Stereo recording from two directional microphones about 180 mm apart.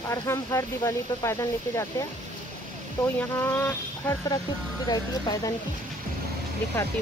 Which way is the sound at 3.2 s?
10° left (ahead or behind).